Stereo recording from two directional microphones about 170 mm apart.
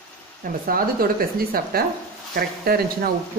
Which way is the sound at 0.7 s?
60° right (ahead or behind).